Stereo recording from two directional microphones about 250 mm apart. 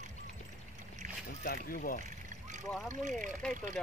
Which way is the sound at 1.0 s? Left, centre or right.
Right.